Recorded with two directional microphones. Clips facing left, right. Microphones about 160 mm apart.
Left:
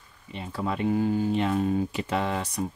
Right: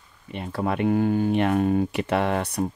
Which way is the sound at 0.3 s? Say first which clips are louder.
Right 4 dB; 60° right (ahead or behind).